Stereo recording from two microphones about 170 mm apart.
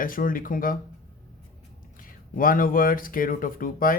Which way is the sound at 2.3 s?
55° left (ahead or behind).